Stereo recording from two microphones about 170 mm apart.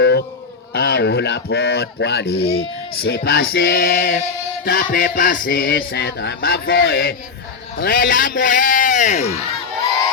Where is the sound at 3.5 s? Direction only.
65° left (ahead or behind).